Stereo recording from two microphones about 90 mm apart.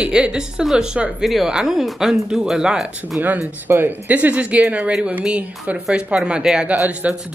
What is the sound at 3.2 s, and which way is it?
Speech, 20° right (ahead or behind).